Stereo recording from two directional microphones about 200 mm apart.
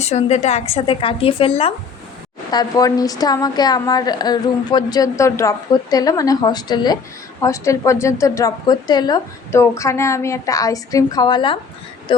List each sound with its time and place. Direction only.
0.0 s a woman's voice: 35° left (ahead or behind)